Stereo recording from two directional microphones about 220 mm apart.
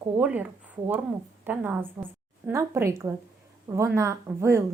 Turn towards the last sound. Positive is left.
turn(degrees=-15)  # may be behind; listen again after turning